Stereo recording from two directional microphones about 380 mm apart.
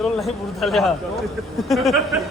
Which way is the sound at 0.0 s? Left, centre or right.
Centre.